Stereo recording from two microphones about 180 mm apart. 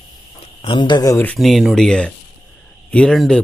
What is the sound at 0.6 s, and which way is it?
Speech, 30° left (ahead or behind).